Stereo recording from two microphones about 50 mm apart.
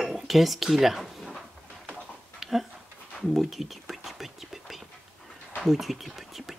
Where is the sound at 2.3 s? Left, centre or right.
Centre.